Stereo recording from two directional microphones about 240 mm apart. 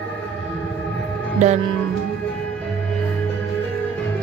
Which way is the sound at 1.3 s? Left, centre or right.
Right.